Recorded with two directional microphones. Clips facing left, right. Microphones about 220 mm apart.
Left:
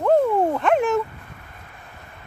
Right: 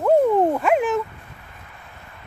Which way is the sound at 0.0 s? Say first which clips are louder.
Right 2 dB; 10° right (ahead or behind).